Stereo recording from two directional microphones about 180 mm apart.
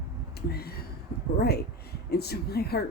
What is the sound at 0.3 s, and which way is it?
Speech, 60° left (ahead or behind).